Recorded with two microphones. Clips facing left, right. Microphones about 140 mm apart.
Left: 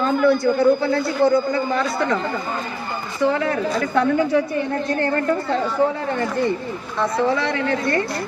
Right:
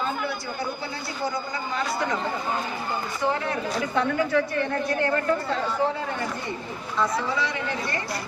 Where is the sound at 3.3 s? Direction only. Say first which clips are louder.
Left 6 dB; 90° left.